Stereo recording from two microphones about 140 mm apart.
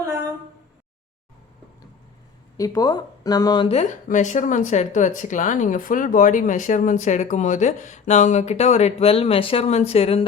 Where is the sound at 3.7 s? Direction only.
55° left (ahead or behind).